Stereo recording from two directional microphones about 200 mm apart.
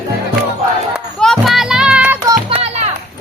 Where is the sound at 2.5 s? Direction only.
30° right (ahead or behind).